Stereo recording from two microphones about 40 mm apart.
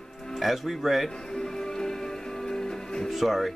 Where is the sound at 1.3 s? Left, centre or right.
Centre.